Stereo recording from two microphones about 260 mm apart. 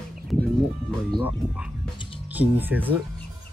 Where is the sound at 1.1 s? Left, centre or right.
Centre.